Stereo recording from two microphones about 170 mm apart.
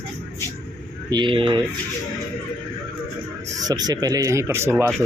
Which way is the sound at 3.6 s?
20° right (ahead or behind).